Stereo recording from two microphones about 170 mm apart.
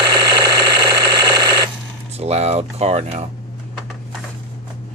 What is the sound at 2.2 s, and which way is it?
Speech, 40° right (ahead or behind).